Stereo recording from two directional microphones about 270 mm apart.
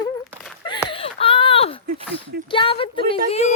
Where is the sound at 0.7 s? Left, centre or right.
Centre.